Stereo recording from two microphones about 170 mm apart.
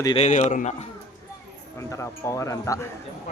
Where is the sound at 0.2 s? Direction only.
45° left (ahead or behind).